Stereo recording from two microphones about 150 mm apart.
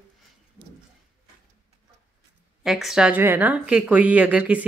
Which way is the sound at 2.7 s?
Centre (ahead or behind).